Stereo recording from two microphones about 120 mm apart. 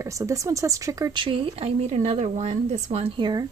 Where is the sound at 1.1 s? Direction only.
45° right (ahead or behind); by 3.1 s 65° right (ahead or behind).